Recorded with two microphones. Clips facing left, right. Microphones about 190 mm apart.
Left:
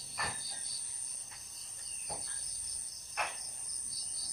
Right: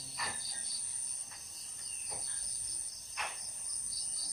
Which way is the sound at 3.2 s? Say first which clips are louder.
Left 5 dB; 55° left (ahead or behind).